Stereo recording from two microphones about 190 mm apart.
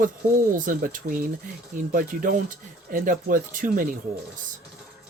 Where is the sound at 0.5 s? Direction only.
45° right (ahead or behind).